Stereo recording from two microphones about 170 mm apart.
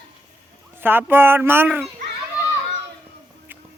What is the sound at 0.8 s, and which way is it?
Speech, 10° right (ahead or behind).